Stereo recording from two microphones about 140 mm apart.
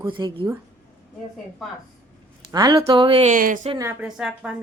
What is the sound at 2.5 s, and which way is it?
Speech, 25° right (ahead or behind).